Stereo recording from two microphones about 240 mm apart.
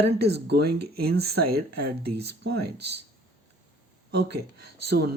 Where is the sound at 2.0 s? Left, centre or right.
Right.